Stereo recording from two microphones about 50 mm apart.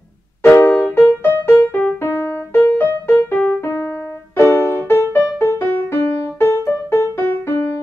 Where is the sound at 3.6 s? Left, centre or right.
Left.